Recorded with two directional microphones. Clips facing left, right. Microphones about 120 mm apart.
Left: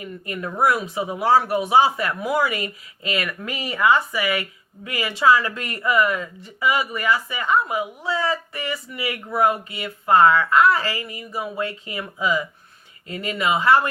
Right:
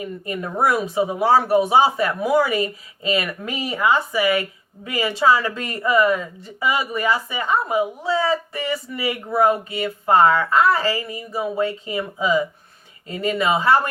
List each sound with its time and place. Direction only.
0.0 s speech: 25° right (ahead or behind)